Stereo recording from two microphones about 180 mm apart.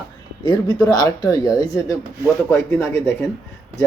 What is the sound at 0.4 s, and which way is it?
Speech, 25° left (ahead or behind).